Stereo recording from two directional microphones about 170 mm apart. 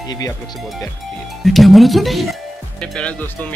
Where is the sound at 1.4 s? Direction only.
Centre (ahead or behind).